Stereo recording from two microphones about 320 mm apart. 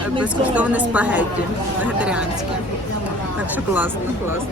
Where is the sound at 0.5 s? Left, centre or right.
Centre.